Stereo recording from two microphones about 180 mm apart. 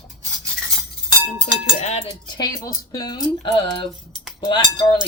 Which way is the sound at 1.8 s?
35° left (ahead or behind).